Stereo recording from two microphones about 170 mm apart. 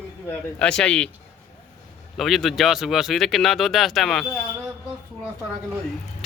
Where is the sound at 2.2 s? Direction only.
Centre (ahead or behind).